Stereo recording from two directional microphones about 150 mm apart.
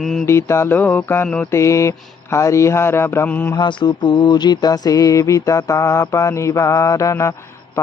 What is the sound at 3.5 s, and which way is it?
Speech, 30° left (ahead or behind).